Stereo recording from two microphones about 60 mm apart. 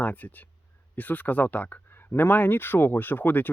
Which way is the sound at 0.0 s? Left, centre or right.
Left.